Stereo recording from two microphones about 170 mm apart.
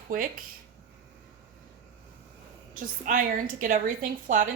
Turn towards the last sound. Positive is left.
turn(degrees=-50)  # may be behind; listen again after turning